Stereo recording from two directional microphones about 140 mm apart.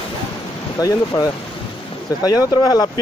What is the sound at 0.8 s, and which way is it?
Speech, 25° left (ahead or behind).